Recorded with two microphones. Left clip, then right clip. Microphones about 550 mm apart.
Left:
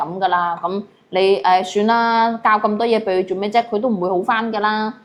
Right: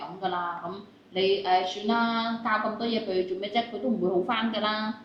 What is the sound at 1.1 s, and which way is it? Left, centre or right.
A woman's voice, left.